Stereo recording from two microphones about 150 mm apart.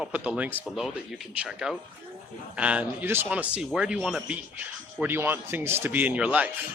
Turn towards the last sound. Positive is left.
turn(degrees=-10)  # may be behind; listen again after turning